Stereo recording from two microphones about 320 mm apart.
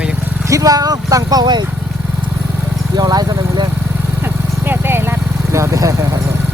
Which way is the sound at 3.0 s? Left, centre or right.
Centre.